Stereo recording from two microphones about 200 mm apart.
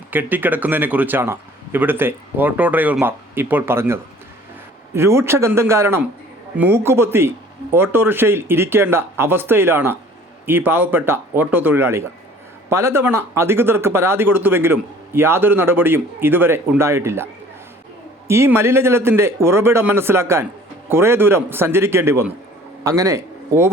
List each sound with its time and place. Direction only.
0.1 s speech: 10° right (ahead or behind)
18.3 s a man's voice: 10° right (ahead or behind)